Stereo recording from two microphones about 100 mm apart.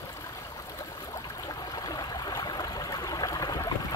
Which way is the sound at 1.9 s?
45° left (ahead or behind).